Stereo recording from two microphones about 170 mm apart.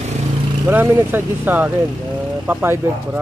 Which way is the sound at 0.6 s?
10° right (ahead or behind).